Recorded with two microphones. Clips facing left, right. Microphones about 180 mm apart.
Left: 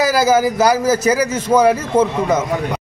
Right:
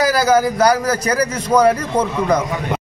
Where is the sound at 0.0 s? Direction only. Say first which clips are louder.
Left 1 dB; 25° left (ahead or behind).